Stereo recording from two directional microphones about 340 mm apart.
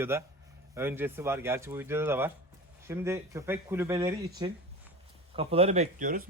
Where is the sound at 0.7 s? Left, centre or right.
Centre; by 6.2 s right.